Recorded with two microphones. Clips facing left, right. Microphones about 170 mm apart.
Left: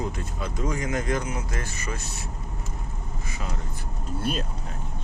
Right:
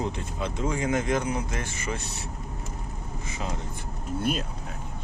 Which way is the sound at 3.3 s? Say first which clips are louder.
Right 3 dB; 20° right (ahead or behind).